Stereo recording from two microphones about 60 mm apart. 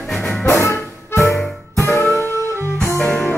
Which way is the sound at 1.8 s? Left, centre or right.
Left.